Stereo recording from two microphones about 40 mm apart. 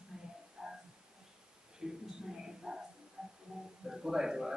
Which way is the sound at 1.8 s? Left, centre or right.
Centre.